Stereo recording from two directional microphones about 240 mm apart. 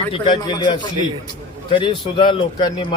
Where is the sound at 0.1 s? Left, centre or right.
Centre.